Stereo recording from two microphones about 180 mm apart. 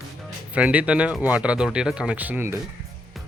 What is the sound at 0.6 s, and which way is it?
Speech, 5° right (ahead or behind).